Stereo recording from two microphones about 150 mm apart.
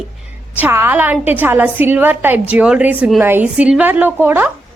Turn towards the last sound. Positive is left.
turn(degrees=-15)  # may be behind; listen again after turning